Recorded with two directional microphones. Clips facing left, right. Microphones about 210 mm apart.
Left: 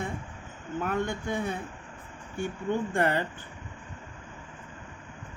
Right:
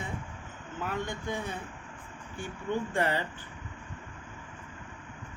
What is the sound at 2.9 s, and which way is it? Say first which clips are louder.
Speech: left 3 dB; 55° left (ahead or behind).